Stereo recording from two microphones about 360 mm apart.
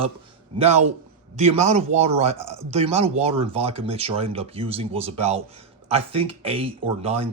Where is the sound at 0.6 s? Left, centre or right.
Centre.